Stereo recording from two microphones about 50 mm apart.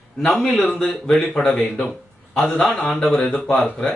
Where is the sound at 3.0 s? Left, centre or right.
Centre.